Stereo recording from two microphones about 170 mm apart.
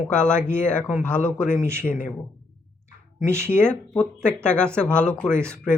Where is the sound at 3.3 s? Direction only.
15° right (ahead or behind).